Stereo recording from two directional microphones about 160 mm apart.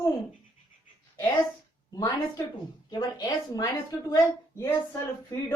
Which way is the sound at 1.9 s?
25° left (ahead or behind).